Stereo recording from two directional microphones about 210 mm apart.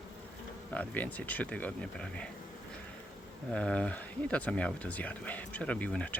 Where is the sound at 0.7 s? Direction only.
5° left (ahead or behind).